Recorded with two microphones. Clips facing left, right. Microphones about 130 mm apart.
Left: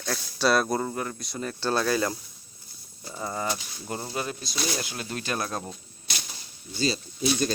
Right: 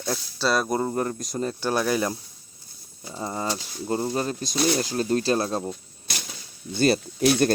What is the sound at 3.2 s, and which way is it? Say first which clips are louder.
Speech: right 2 dB; 25° right (ahead or behind).